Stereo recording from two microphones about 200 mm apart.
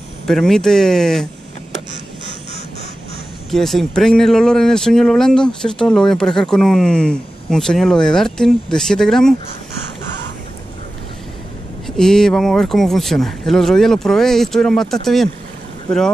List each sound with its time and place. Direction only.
0.3 s speech: centre (ahead or behind)
3.4 s speech: centre (ahead or behind)
12.0 s speech: 5° left (ahead or behind)